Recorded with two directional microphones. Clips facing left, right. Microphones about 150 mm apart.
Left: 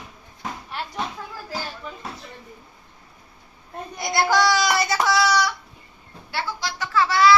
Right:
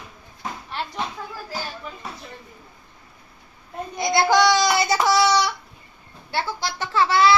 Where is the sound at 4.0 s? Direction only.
20° right (ahead or behind).